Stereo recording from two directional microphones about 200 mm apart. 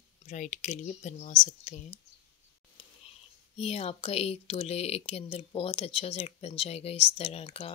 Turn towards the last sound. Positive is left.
turn(degrees=30)  # may be behind; listen again after turning